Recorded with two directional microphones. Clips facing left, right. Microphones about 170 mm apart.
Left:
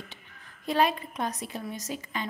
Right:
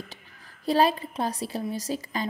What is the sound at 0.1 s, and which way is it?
A woman's voice, 35° right (ahead or behind).